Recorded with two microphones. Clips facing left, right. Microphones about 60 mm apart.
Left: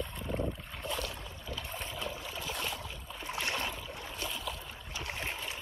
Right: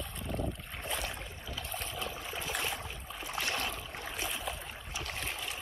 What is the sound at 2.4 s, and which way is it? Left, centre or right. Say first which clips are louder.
Boat: right 2 dB; right.